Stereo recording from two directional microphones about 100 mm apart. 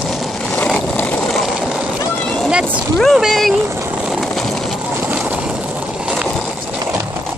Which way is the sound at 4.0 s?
Centre (ahead or behind).